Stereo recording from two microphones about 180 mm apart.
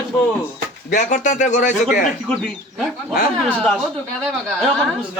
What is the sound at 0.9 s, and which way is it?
Speech, 45° left (ahead or behind).